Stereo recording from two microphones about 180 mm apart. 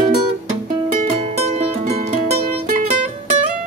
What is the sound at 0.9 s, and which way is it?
Music, 40° right (ahead or behind).